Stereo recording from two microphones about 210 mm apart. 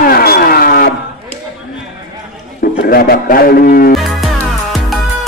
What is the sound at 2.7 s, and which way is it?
A man's voice, 45° left (ahead or behind).